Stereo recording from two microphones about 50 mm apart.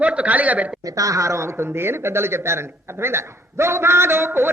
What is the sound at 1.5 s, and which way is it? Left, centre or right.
Speech, right.